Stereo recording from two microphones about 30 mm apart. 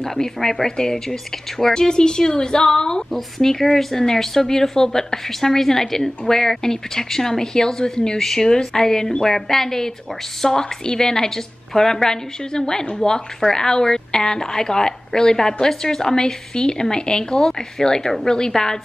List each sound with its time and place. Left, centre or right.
0.0 s a woman's voice: centre
3.1 s a woman's voice: centre